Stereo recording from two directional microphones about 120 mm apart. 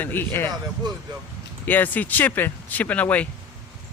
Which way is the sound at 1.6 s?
15° left (ahead or behind).